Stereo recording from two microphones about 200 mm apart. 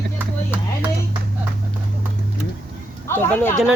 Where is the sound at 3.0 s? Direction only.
10° left (ahead or behind).